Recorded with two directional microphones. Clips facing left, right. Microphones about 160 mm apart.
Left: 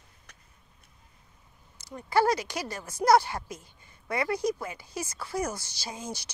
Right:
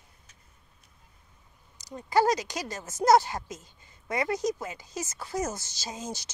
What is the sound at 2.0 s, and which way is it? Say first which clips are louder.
Speech: right 1 dB; 20° right (ahead or behind).